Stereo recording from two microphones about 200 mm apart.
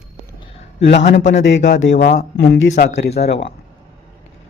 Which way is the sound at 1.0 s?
40° left (ahead or behind).